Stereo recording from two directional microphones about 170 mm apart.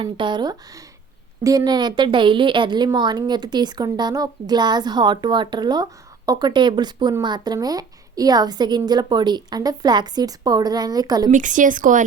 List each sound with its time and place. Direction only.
0.0 s a woman's voice: 25° right (ahead or behind)
11.3 s speech: 50° right (ahead or behind)